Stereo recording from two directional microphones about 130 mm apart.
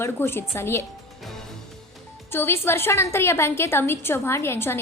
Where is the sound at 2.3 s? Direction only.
20° left (ahead or behind).